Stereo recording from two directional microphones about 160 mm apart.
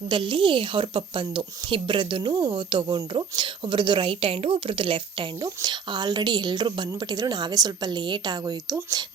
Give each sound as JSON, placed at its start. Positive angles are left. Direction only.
{"t": 0.1, "sound": "a woman's voice", "side_deg": -30}